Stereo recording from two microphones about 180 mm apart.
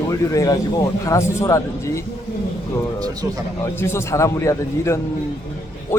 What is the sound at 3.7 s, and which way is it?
Speech, 15° left (ahead or behind).